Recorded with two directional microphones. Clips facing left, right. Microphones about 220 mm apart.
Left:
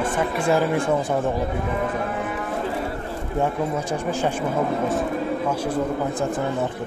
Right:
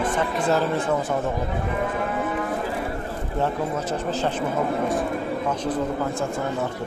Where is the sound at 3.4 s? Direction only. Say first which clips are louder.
Left 2 dB; 10° left (ahead or behind).